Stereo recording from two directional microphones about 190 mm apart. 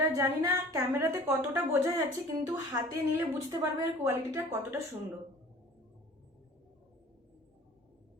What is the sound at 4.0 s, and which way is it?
Speech, 15° right (ahead or behind).